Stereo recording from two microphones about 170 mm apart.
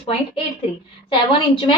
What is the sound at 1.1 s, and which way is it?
Speech, 30° left (ahead or behind).